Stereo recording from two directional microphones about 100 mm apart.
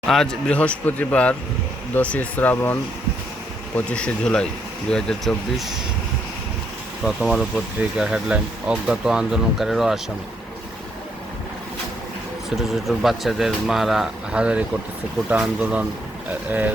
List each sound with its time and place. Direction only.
0.1 s a man's voice: 5° left (ahead or behind)
3.8 s a man's voice: 10° left (ahead or behind)
7.0 s speech: 5° right (ahead or behind)
12.5 s speech: centre (ahead or behind)